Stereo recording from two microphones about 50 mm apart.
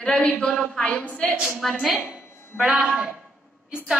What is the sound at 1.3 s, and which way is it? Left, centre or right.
A woman's voice, right.